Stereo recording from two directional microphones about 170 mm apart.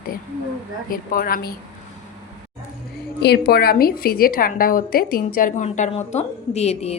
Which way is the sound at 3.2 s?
70° left (ahead or behind).